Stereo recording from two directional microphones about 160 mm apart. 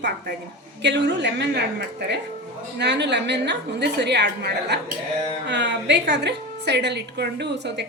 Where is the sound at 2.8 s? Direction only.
90° right.